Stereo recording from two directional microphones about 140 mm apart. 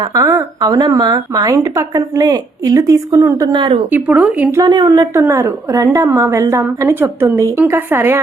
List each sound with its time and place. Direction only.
0.1 s speech: 20° right (ahead or behind)
3.5 s speech: 35° right (ahead or behind)
3.9 s a woman's voice: 10° right (ahead or behind)
4.5 s a woman's voice: 30° right (ahead or behind)